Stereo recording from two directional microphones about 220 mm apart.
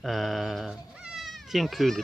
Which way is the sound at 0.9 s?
5° right (ahead or behind).